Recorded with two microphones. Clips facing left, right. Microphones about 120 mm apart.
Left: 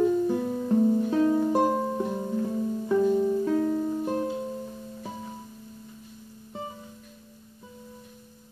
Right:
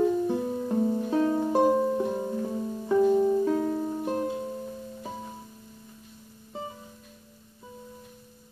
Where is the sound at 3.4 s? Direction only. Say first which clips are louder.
Left 1 dB; 10° right (ahead or behind).